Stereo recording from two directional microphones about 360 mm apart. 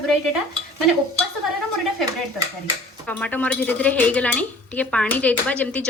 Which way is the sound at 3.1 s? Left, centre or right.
Centre.